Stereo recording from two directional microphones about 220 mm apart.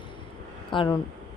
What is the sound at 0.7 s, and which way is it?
Speech, 20° left (ahead or behind).